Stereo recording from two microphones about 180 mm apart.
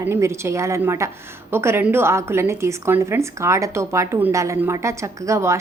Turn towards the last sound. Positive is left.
turn(degrees=-15)  # may be behind; listen again after turning